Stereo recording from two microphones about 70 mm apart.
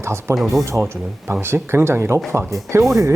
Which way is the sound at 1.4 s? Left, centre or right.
Right.